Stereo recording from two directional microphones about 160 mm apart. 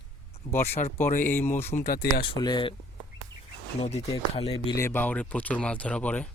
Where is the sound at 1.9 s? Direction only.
75° left (ahead or behind).